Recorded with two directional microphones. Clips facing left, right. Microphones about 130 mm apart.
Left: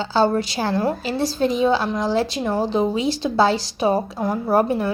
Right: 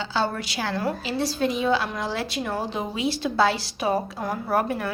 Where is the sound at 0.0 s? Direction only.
35° left (ahead or behind).